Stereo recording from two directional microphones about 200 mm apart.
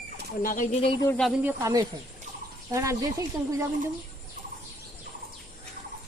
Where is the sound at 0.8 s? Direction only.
15° left (ahead or behind).